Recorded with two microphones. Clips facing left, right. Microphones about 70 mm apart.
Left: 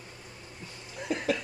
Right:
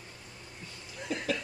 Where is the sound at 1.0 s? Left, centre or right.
Left.